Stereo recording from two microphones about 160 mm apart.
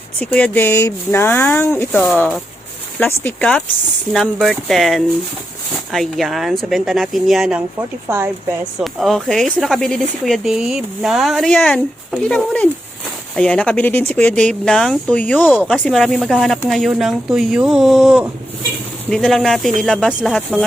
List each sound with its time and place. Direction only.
0.2 s speech: 10° left (ahead or behind)
7.8 s speech: 15° right (ahead or behind)
8.8 s speech: centre (ahead or behind)